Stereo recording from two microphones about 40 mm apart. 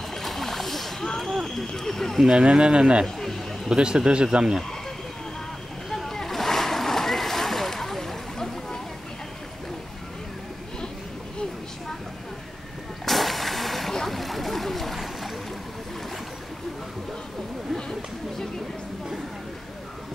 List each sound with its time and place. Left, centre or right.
0.1 s splash: centre
1.2 s a sound: centre
1.8 s speech: centre
2.3 s a man's voice: right
3.2 s a sound: centre
3.6 s a man's voice: centre
5.9 s splash: centre
13.0 s vehicle: centre
14.0 s a sound: centre